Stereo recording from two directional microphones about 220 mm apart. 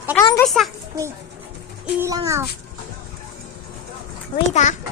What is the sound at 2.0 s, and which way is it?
Speech, 15° right (ahead or behind).